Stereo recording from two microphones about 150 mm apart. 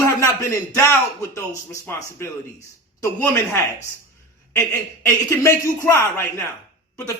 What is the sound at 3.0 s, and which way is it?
Speech, 15° left (ahead or behind).